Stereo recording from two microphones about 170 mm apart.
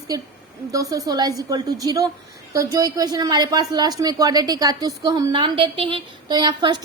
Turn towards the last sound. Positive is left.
turn(degrees=-25)  # may be behind; listen again after turning